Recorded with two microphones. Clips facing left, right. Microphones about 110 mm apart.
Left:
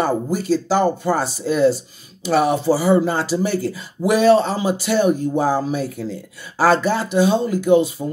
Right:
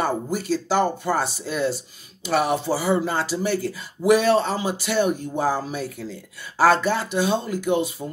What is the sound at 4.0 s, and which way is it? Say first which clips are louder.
Speech: right 1 dB; 40° left (ahead or behind).